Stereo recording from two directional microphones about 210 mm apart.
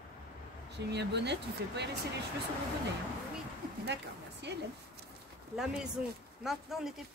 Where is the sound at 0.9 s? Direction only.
55° right (ahead or behind).